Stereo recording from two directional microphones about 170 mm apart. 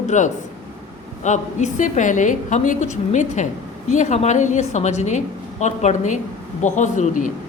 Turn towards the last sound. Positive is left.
turn(degrees=45)  # may be behind; listen again after turning